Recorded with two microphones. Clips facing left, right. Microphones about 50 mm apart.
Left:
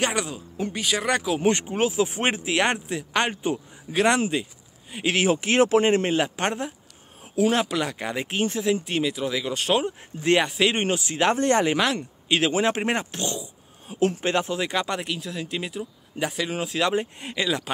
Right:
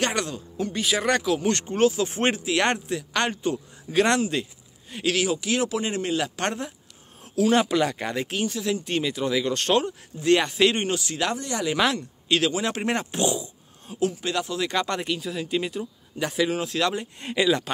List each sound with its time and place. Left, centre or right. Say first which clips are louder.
0.0 s speech: even; centre
2.3 s speech: even; left
5.0 s a man's voice: left 2 dB; left
6.2 s speech: left 1 dB; left
7.5 s speech: right 3 dB; centre
8.1 s speech: even; centre
8.4 s speech: left 5 dB; left
8.8 s speech: even; centre
9.8 s speech: right 1 dB; left
11.3 s a man's voice: left 7 dB; left
12.3 s speech: left 2 dB; left
13.9 s a man's voice: left 3 dB; left
14.7 s speech: right 1 dB; centre
17.3 s speech: right 5 dB; centre